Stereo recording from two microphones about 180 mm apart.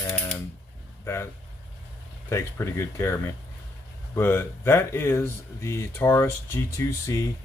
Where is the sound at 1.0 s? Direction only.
15° left (ahead or behind).